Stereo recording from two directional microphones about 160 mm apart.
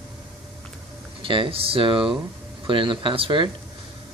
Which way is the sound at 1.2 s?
35° right (ahead or behind).